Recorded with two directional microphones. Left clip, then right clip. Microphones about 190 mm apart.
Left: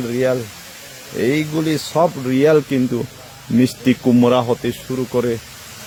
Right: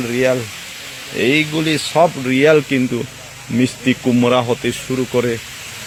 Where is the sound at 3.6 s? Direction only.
30° left (ahead or behind).